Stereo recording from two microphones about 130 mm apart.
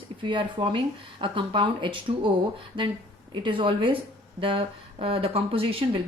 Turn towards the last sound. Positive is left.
turn(degrees=-45)  # may be behind; listen again after turning